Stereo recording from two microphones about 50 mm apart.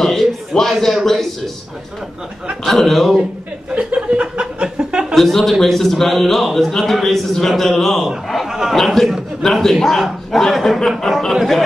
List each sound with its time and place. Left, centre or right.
0.0 s a sound: centre
2.6 s a man's voice: centre
3.7 s chuckle: right
5.1 s a man's voice: centre